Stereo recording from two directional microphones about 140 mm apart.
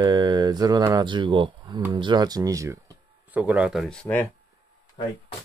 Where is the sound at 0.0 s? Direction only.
30° right (ahead or behind).